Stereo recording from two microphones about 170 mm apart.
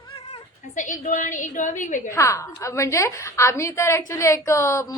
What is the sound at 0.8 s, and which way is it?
A woman's voice, 50° left (ahead or behind).